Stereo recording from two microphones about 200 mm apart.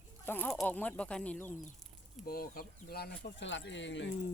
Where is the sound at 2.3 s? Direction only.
45° left (ahead or behind); by 4.1 s 65° left (ahead or behind).